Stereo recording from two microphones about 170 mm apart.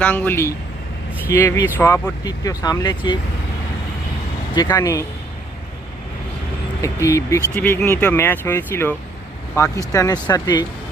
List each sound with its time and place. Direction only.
0.0 s speech: 10° left (ahead or behind)
4.7 s speech: 20° left (ahead or behind)
6.8 s speech: 20° left (ahead or behind)